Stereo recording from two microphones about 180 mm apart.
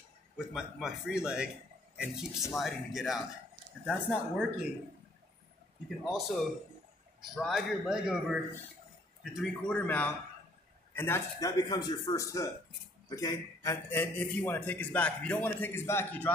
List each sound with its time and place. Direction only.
0.5 s speech: 5° right (ahead or behind)
6.0 s a man's voice: centre (ahead or behind)